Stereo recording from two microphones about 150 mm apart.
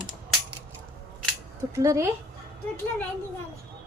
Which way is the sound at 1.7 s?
20° right (ahead or behind).